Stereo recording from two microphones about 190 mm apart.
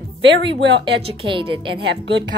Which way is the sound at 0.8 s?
25° right (ahead or behind).